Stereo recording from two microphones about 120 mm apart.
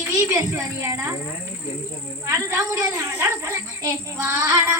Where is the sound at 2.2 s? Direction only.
25° right (ahead or behind).